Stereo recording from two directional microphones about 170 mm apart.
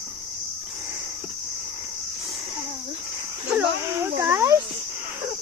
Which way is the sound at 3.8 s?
15° right (ahead or behind).